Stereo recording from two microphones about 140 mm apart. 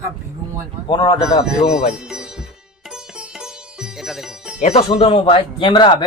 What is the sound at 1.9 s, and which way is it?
Speech, 5° right (ahead or behind).